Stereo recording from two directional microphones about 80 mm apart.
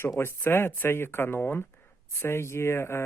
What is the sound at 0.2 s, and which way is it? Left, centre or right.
Speech, left.